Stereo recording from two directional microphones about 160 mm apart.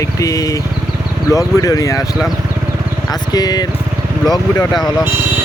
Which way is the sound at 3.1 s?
25° left (ahead or behind).